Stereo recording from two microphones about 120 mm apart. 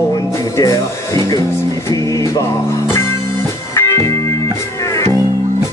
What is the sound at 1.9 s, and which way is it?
Music, 30° left (ahead or behind).